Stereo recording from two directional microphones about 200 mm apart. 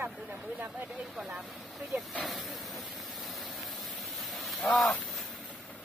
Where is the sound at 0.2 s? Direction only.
10° right (ahead or behind).